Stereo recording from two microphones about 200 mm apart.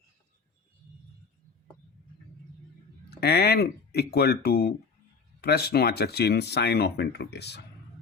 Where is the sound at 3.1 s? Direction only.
50° left (ahead or behind).